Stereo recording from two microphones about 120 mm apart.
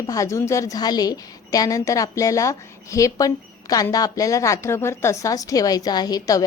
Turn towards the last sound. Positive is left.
turn(degrees=30)  # may be behind; listen again after turning